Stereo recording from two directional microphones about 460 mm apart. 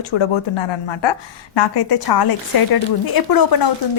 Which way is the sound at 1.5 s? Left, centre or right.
Left.